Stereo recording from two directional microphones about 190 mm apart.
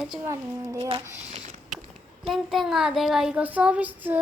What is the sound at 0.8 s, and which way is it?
Speech, 30° right (ahead or behind).